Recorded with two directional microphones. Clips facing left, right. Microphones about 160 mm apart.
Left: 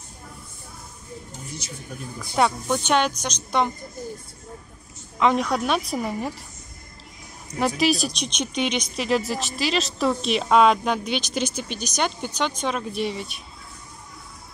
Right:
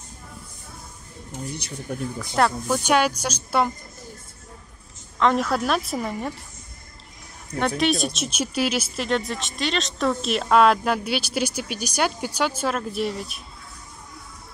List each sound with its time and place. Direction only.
1.6 s speech: 60° right (ahead or behind)
2.3 s speech: centre (ahead or behind)
5.2 s speech: centre (ahead or behind)
7.5 s speech: 5° left (ahead or behind)